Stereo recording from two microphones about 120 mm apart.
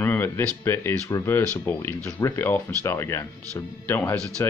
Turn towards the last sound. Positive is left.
turn(degrees=20)  # may be behind; listen again after turning